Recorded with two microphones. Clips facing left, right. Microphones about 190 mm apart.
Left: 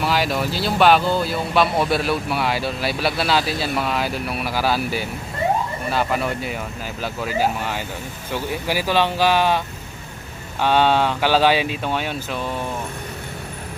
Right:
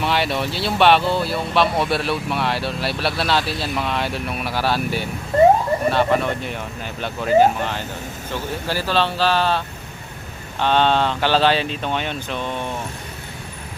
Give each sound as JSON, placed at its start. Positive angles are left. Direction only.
{"t": 0.0, "sound": "speech", "side_deg": 0}